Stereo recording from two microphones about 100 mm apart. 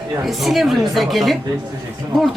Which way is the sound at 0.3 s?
Centre (ahead or behind).